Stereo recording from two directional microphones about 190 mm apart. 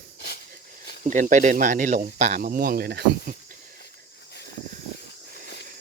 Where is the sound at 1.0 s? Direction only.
40° right (ahead or behind).